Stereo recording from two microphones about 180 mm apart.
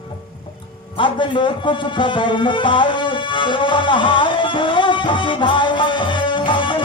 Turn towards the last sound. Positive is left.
turn(degrees=25)  # may be behind; listen again after turning